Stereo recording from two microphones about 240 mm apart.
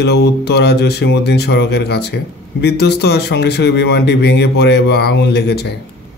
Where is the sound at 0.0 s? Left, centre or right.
Left.